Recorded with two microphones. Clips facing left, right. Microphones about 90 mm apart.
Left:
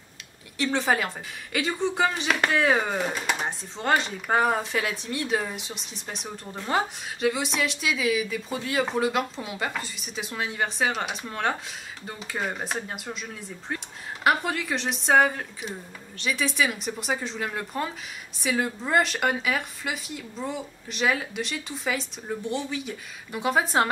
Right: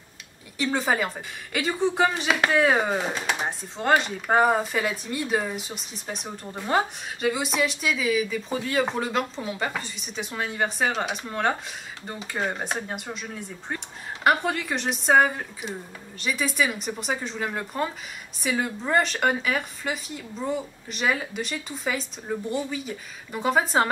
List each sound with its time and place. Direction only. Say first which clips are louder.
0.6 s speech: even; centre (ahead or behind)